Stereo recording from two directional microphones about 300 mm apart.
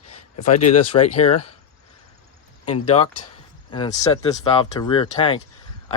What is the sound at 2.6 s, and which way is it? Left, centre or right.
Speech, centre.